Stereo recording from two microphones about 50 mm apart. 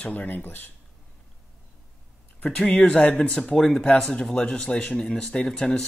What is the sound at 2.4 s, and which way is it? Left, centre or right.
Speech, centre.